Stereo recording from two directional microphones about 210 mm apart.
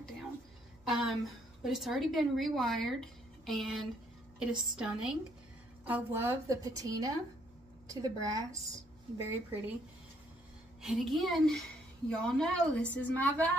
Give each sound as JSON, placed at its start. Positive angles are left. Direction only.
{"t": 0.8, "sound": "a woman's voice", "side_deg": 0}
{"t": 10.8, "sound": "a woman's voice", "side_deg": 0}